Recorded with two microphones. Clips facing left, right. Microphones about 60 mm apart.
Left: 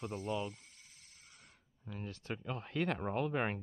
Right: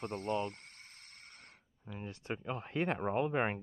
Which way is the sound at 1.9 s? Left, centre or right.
Right.